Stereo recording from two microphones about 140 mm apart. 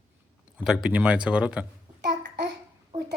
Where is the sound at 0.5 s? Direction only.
5° right (ahead or behind).